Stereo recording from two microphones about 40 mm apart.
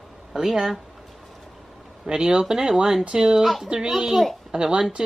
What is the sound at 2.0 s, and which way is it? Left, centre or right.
Speech, centre.